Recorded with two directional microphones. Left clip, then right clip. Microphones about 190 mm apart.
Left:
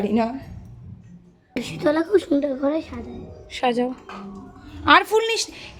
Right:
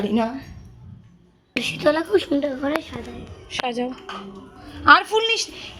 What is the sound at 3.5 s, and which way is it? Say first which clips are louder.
A woman's voice: left 3 dB; 10° left (ahead or behind).